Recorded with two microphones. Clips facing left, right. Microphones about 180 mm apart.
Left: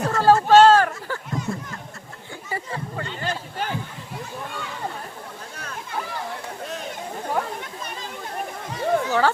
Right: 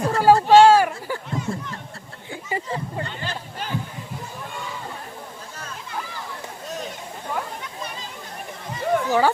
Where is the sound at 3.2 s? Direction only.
50° left (ahead or behind).